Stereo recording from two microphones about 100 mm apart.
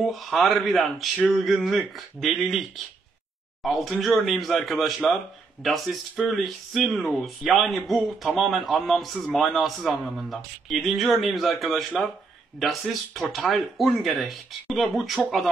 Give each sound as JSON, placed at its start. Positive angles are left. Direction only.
{"t": 0.0, "sound": "speech", "side_deg": 0}